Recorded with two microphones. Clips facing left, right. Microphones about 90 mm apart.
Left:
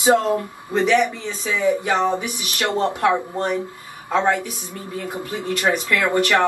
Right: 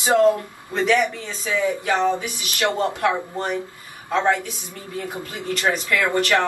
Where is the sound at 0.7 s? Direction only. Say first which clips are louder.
Left 2 dB; 20° left (ahead or behind).